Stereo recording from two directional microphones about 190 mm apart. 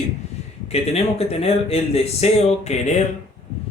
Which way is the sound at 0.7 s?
30° left (ahead or behind).